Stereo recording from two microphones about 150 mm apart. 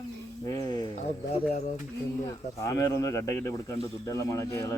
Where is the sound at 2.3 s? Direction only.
25° left (ahead or behind).